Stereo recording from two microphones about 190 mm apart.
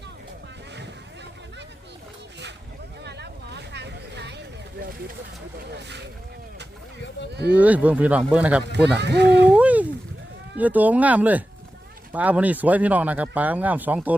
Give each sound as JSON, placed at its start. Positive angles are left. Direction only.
{"t": 3.0, "sound": "vehicle", "side_deg": -65}
{"t": 7.2, "sound": "speech", "side_deg": 65}
{"t": 7.5, "sound": "speech", "side_deg": -10}
{"t": 8.7, "sound": "speech", "side_deg": -65}
{"t": 9.5, "sound": "a sound", "side_deg": -5}
{"t": 10.6, "sound": "speech", "side_deg": -10}